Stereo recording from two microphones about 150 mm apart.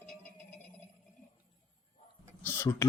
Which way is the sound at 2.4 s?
15° left (ahead or behind).